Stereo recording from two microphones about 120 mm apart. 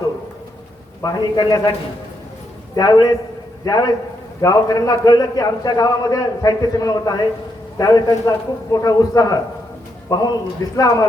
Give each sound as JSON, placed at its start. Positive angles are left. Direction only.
{"t": 1.0, "sound": "a man's voice", "side_deg": 30}
{"t": 2.7, "sound": "a man's voice", "side_deg": 35}